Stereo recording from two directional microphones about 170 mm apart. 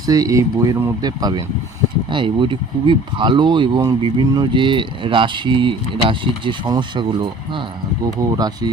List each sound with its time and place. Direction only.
0.0 s speech: 20° right (ahead or behind)
8.4 s speech: 25° right (ahead or behind)